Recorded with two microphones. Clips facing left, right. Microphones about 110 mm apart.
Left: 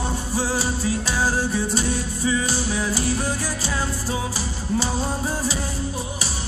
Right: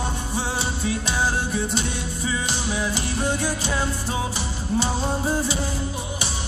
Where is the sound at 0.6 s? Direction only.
35° left (ahead or behind).